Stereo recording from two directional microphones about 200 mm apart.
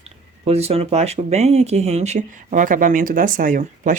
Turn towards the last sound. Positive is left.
turn(degrees=-40)  # may be behind; listen again after turning